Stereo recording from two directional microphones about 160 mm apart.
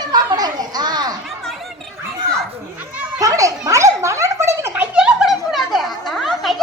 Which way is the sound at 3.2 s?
20° right (ahead or behind).